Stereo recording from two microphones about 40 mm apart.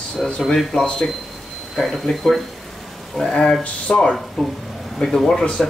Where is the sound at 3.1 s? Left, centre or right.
Centre.